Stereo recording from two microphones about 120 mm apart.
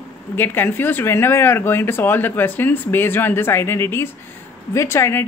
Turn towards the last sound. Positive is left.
turn(degrees=20)  # may be behind; listen again after turning